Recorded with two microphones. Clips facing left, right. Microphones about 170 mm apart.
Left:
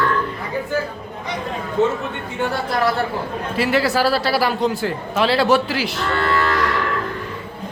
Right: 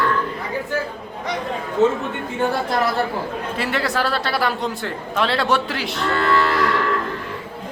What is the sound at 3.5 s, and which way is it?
A man's voice, centre (ahead or behind).